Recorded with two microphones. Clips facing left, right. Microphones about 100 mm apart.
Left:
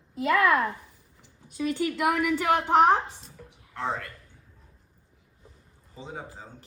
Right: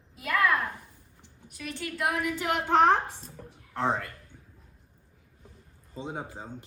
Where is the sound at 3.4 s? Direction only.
30° right (ahead or behind).